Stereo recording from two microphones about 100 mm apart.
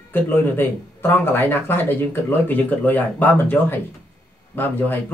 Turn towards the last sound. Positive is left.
turn(degrees=20)  # may be behind; listen again after turning